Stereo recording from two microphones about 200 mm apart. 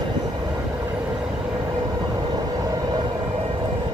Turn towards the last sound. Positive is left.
turn(degrees=-20)  # may be behind; listen again after turning